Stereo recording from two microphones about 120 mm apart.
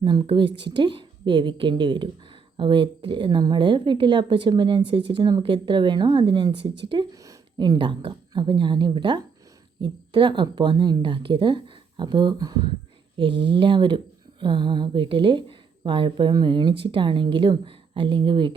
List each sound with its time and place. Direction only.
0.0 s a woman's voice: 40° right (ahead or behind)
7.8 s a woman's voice: 40° right (ahead or behind)